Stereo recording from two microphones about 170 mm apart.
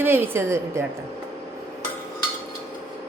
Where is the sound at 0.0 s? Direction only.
15° right (ahead or behind).